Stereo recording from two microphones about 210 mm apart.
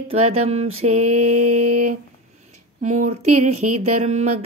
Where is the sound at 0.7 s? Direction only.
30° right (ahead or behind).